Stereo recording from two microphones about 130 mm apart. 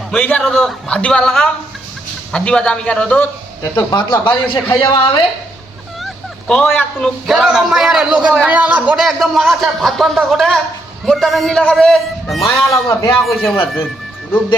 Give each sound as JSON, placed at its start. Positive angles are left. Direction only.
{"t": 0.1, "sound": "a man's voice", "side_deg": 15}
{"t": 3.9, "sound": "a man's voice", "side_deg": 35}
{"t": 6.5, "sound": "a man's voice", "side_deg": 5}
{"t": 12.5, "sound": "a man's voice", "side_deg": 20}